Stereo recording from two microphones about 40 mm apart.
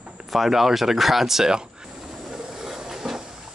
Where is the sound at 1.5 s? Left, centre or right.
Centre.